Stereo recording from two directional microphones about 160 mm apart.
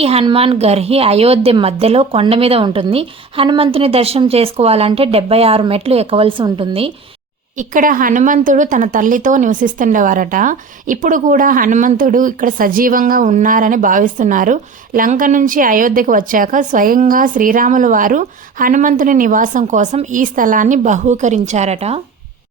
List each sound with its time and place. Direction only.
0.0 s a woman's voice: 35° right (ahead or behind)
7.6 s a woman's voice: 55° right (ahead or behind); by 22.0 s 40° right (ahead or behind)